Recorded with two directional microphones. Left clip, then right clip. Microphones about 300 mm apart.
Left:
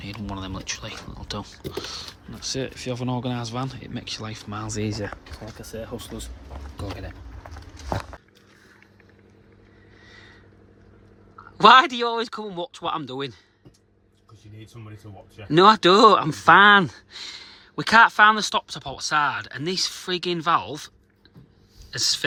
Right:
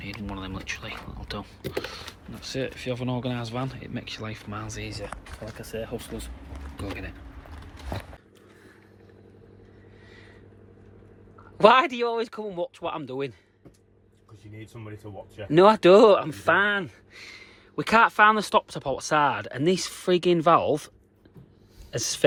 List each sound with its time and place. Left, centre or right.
0.0 s speech: centre
4.7 s speech: left
5.5 s speech: centre
11.5 s speech: centre
15.4 s speech: centre